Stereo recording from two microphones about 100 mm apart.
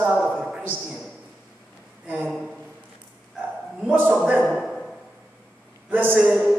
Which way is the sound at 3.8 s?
15° right (ahead or behind).